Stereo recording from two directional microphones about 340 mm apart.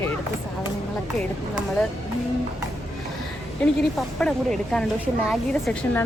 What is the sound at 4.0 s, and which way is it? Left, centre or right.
A woman's voice, centre.